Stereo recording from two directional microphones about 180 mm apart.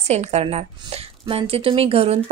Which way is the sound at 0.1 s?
35° right (ahead or behind).